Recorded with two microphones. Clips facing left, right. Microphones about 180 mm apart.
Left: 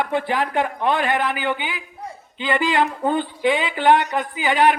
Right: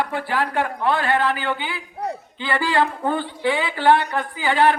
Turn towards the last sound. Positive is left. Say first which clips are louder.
# even
turn(degrees=15)  # may be behind; listen again after turning